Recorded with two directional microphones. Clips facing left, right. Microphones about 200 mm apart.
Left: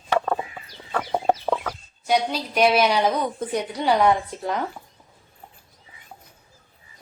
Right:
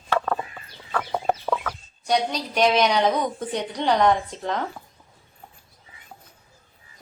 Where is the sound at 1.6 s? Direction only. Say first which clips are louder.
Left 1 dB; 5° left (ahead or behind).